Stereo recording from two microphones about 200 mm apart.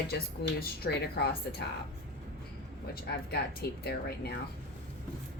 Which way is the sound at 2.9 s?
50° left (ahead or behind).